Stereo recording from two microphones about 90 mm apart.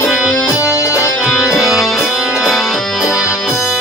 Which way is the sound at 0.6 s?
35° left (ahead or behind).